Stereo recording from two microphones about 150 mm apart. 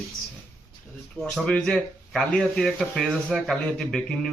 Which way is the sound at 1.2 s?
5° left (ahead or behind).